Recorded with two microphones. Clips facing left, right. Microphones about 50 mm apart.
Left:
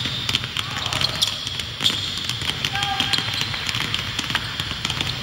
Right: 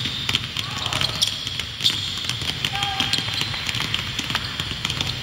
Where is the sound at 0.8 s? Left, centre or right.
Centre.